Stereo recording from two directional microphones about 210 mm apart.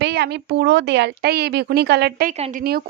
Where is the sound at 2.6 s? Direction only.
45° right (ahead or behind).